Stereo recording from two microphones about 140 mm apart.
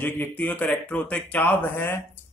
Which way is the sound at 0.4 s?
10° left (ahead or behind).